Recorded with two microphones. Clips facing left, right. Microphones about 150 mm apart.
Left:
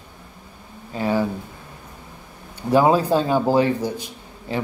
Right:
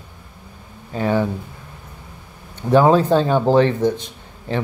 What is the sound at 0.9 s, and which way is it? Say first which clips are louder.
Speech: right 2 dB; 45° right (ahead or behind).